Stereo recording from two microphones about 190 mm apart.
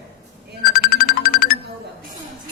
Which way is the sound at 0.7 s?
50° left (ahead or behind).